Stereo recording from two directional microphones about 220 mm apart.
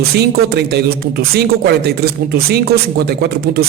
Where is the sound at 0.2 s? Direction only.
50° right (ahead or behind).